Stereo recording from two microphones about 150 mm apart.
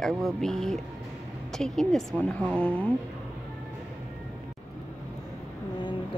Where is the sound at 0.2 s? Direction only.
5° left (ahead or behind).